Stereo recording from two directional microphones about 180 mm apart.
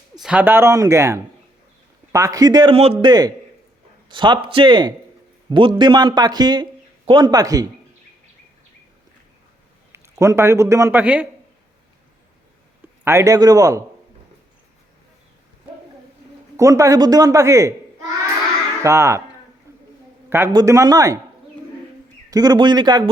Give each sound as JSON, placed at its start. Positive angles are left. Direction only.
{"t": 0.2, "sound": "speech", "side_deg": -5}
{"t": 9.9, "sound": "a man's voice", "side_deg": -15}
{"t": 13.1, "sound": "speech", "side_deg": -15}
{"t": 16.6, "sound": "speech", "side_deg": -15}
{"t": 18.8, "sound": "speech", "side_deg": -15}
{"t": 19.7, "sound": "a sound", "side_deg": -15}
{"t": 20.5, "sound": "speech", "side_deg": -20}
{"t": 22.3, "sound": "speech", "side_deg": -20}